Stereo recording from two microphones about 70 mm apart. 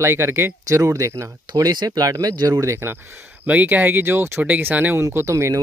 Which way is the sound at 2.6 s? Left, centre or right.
Right.